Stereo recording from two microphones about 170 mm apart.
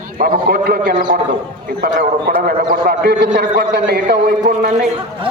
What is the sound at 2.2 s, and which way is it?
A man's voice, 65° right (ahead or behind).